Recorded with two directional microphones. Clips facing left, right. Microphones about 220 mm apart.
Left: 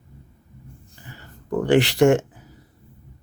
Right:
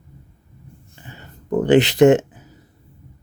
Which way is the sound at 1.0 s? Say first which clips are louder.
Right 3 dB; 20° right (ahead or behind).